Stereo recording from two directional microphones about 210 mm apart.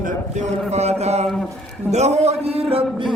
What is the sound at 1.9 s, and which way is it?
A man's voice, 30° right (ahead or behind).